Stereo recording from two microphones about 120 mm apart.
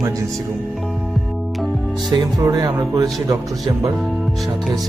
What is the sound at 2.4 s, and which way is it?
Speech, 30° right (ahead or behind).